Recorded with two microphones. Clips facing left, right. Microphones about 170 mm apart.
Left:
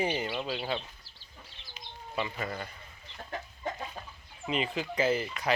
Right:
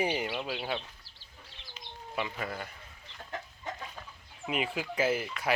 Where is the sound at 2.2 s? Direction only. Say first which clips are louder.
Left 1 dB; 5° right (ahead or behind).